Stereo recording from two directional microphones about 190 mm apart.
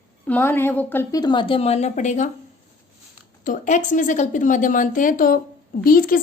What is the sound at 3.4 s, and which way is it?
A woman's voice, 40° left (ahead or behind).